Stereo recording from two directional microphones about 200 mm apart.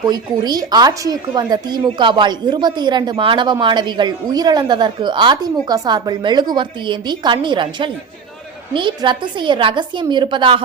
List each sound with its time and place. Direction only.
0.1 s a woman's voice: 20° right (ahead or behind)